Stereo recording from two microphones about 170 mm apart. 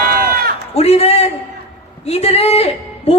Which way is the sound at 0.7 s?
35° left (ahead or behind).